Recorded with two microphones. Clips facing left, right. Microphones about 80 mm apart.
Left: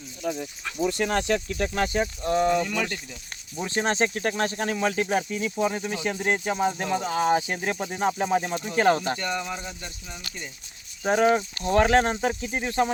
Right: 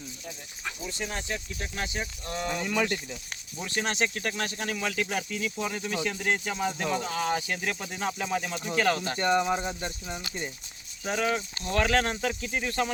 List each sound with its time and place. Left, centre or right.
0.2 s speech: left
0.8 s speech: left
2.2 s speech: left
2.6 s speech: centre
3.6 s speech: left
9.1 s speech: right
11.0 s speech: left